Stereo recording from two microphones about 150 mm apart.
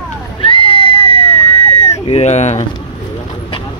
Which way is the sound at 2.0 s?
45° left (ahead or behind).